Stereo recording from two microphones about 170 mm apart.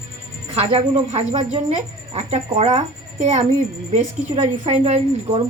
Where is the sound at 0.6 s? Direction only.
35° right (ahead or behind).